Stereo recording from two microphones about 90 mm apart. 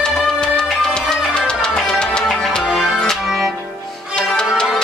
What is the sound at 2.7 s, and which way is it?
Music, centre (ahead or behind).